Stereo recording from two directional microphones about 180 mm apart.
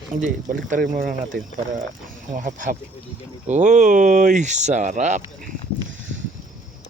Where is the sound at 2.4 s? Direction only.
45° right (ahead or behind).